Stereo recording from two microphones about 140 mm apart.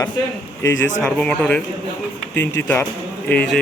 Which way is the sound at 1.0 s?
10° left (ahead or behind).